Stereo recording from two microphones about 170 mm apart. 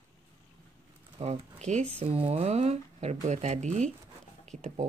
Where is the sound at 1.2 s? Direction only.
40° right (ahead or behind).